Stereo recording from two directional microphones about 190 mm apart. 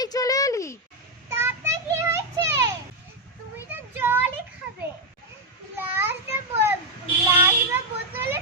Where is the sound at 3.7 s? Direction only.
10° right (ahead or behind).